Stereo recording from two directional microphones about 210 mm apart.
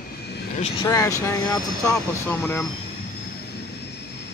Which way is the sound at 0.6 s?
25° left (ahead or behind).